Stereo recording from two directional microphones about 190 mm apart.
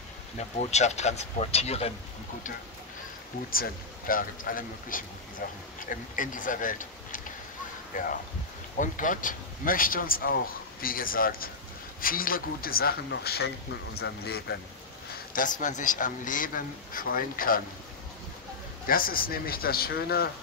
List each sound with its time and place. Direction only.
0.6 s speech: 35° left (ahead or behind)
3.4 s speech: 50° left (ahead or behind)
15.1 s a sound: 45° left (ahead or behind)
15.6 s speech: 40° left (ahead or behind)
18.9 s speech: 50° left (ahead or behind)